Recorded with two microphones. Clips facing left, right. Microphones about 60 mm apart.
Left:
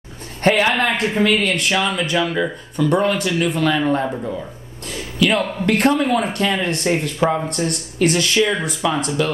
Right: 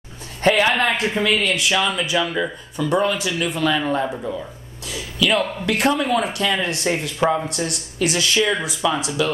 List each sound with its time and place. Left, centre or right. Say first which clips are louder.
0.4 s speech: left 1 dB; left